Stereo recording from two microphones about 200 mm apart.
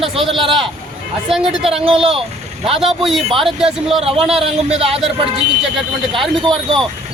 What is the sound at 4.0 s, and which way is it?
Speech, 30° right (ahead or behind).